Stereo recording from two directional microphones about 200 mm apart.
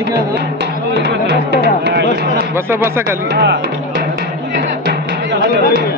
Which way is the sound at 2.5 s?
10° right (ahead or behind).